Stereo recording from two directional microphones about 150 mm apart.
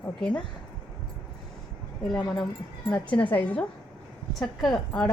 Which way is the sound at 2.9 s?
10° left (ahead or behind).